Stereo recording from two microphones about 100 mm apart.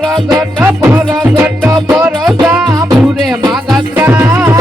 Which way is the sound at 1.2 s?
20° right (ahead or behind).